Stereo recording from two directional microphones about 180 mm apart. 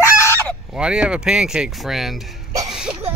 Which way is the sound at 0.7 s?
5° right (ahead or behind).